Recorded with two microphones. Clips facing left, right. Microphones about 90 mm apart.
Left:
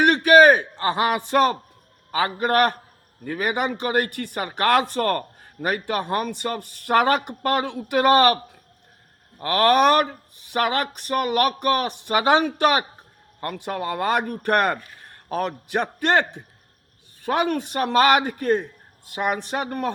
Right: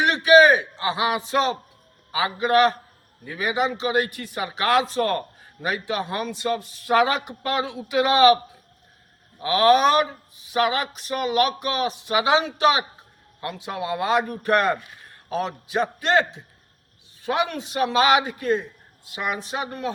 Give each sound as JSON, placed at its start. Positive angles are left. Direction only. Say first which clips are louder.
{"t": 0.0, "sound": "a man's voice", "louder": "left 1 dB", "side_deg": 50}
{"t": 9.4, "sound": "a man's voice", "louder": "even", "side_deg": 60}